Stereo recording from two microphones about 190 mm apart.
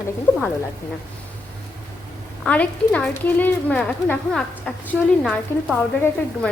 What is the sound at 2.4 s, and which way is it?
A woman's voice, 5° left (ahead or behind).